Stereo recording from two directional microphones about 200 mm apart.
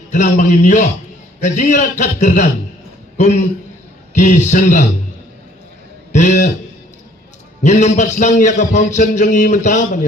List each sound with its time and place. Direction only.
0.1 s a man's voice: 40° left (ahead or behind)
6.1 s a man's voice: 35° left (ahead or behind)
7.6 s a man's voice: 35° left (ahead or behind)